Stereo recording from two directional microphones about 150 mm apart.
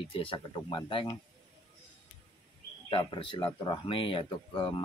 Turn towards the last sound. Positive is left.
turn(degrees=30)  # may be behind; listen again after turning